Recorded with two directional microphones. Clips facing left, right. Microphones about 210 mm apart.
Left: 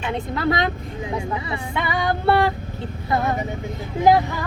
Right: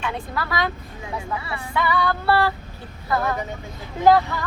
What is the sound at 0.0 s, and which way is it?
Speech, 20° left (ahead or behind).